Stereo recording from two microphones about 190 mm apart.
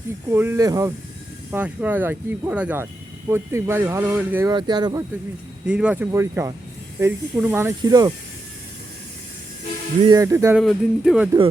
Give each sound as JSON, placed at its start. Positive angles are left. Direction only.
{"t": 0.3, "sound": "speech", "side_deg": -10}
{"t": 1.5, "sound": "speech", "side_deg": -10}
{"t": 4.5, "sound": "speech", "side_deg": -20}
{"t": 5.6, "sound": "speech", "side_deg": -5}
{"t": 10.0, "sound": "speech", "side_deg": -20}
{"t": 10.6, "sound": "speech", "side_deg": 0}